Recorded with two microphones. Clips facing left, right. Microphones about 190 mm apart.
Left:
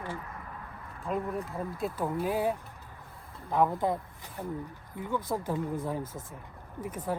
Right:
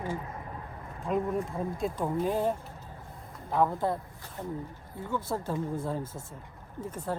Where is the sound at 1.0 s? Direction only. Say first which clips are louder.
Right 3 dB; centre (ahead or behind).